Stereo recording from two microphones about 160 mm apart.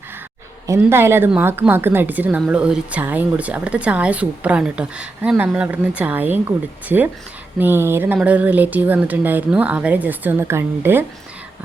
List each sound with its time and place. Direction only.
0.7 s speech: 15° right (ahead or behind)